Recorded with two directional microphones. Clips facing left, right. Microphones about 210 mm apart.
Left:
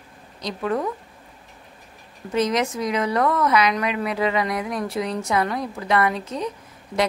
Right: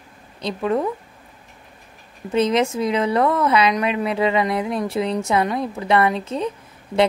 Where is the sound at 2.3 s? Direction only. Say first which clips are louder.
Right 3 dB; 25° right (ahead or behind).